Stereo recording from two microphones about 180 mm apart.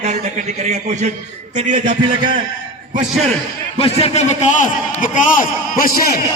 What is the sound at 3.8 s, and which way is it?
A man's voice, 35° left (ahead or behind).